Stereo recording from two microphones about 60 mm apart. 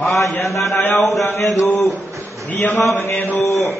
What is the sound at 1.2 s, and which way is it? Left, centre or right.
Speech, left.